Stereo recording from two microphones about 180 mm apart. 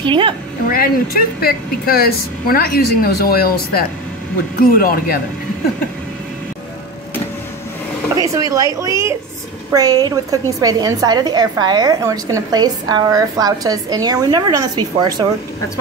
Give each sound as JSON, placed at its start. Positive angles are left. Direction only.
{"t": 0.0, "sound": "a woman's voice", "side_deg": -25}
{"t": 0.7, "sound": "speech", "side_deg": 55}
{"t": 8.2, "sound": "a woman's voice", "side_deg": -20}